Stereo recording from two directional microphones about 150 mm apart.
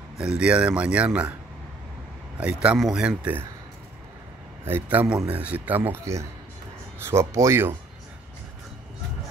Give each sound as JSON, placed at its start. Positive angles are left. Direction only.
{"t": 0.2, "sound": "speech", "side_deg": -5}
{"t": 2.3, "sound": "speech", "side_deg": -10}
{"t": 4.6, "sound": "speech", "side_deg": -15}